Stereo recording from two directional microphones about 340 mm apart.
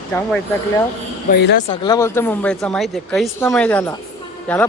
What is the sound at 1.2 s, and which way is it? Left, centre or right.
Speech, left.